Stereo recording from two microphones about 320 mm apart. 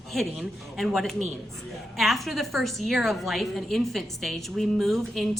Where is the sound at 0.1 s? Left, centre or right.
Centre.